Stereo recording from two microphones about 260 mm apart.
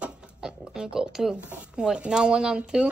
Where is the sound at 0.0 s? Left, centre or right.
Centre.